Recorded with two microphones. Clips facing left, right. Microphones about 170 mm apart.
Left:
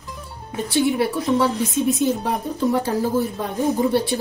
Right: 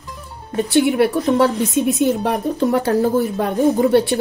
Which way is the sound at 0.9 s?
65° right (ahead or behind).